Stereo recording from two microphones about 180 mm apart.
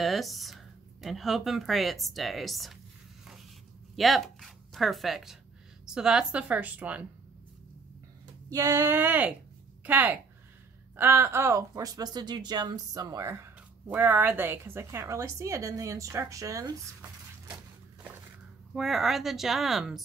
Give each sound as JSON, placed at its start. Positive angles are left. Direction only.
{"t": 0.0, "sound": "speech", "side_deg": 0}
{"t": 3.9, "sound": "speech", "side_deg": 0}
{"t": 8.5, "sound": "speech", "side_deg": -20}
{"t": 18.8, "sound": "speech", "side_deg": 0}